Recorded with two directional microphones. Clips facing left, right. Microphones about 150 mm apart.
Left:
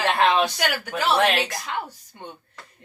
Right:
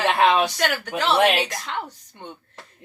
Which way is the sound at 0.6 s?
5° left (ahead or behind).